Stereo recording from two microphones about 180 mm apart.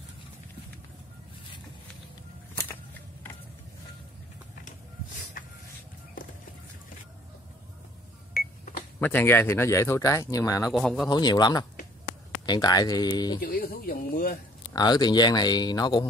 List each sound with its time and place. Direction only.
8.3 s cash register: 55° left (ahead or behind)
9.0 s speech: 10° left (ahead or behind)
10.7 s a man's voice: centre (ahead or behind)
11.1 s speech: 25° left (ahead or behind)
13.4 s speech: 55° left (ahead or behind)
14.7 s speech: 20° left (ahead or behind)